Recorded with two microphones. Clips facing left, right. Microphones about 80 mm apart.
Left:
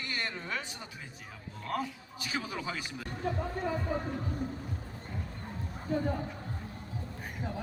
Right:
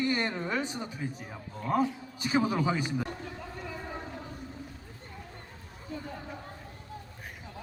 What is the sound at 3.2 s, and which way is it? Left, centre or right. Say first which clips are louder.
Speech: left 7 dB; left.